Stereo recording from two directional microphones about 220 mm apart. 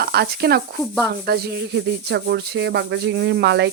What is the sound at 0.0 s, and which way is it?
Speech, 45° right (ahead or behind).